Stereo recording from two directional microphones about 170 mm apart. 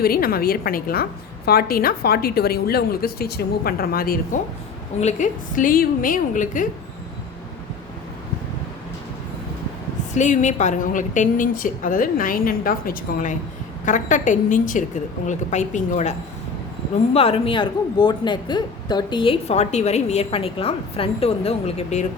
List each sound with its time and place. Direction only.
0.0 s a woman's voice: 60° left (ahead or behind)
4.9 s a woman's voice: 45° left (ahead or behind)
10.2 s a woman's voice: 45° left (ahead or behind)
17.2 s speech: 35° left (ahead or behind)